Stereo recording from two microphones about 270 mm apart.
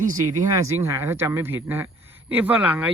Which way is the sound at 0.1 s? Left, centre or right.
Centre.